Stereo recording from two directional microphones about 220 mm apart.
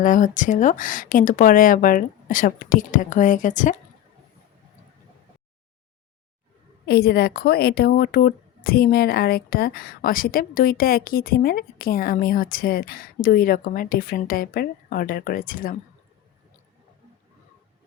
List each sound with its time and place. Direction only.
0.0 s speech: 35° left (ahead or behind)
6.8 s speech: 45° left (ahead or behind)